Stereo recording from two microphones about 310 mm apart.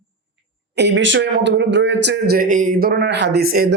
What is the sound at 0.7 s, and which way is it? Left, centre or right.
Speech, right.